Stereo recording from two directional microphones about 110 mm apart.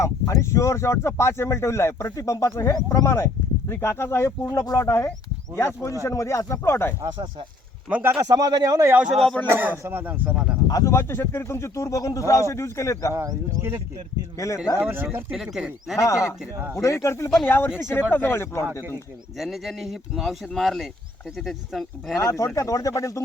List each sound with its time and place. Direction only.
0.0 s speech: 25° left (ahead or behind)
7.9 s speech: 10° right (ahead or behind)
8.4 s a man's voice: 35° right (ahead or behind)
9.2 s speech: 5° left (ahead or behind)
9.5 s speech: 20° right (ahead or behind)
10.7 s speech: 30° left (ahead or behind)
13.1 s speech: 25° right (ahead or behind)
14.3 s speech: 30° left (ahead or behind)
14.8 s speech: 15° right (ahead or behind)
15.3 s speech: 5° right (ahead or behind)
16.0 s speech: 25° left (ahead or behind)
19.4 s speech: centre (ahead or behind)
22.2 s speech: 30° left (ahead or behind)